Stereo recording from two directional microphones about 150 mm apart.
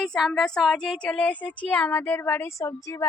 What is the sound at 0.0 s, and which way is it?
Speech, centre (ahead or behind).